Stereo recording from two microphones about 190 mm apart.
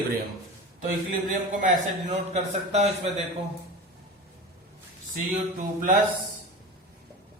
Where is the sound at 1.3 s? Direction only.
40° right (ahead or behind).